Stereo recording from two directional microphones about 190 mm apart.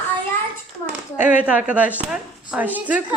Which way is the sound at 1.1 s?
10° right (ahead or behind).